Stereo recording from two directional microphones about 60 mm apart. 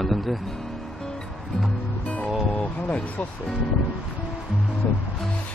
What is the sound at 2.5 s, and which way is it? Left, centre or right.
Speech, left.